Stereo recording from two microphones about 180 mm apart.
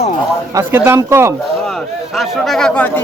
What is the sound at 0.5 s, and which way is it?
Speech, 15° right (ahead or behind).